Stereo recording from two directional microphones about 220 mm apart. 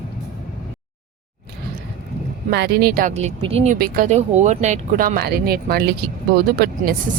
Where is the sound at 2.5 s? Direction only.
50° right (ahead or behind).